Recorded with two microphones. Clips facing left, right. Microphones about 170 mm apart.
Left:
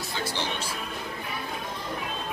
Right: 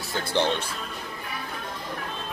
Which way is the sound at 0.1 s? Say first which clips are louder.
Right 8 dB; 60° right (ahead or behind).